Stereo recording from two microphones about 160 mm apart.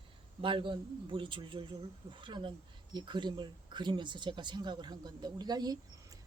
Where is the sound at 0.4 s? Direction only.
30° right (ahead or behind).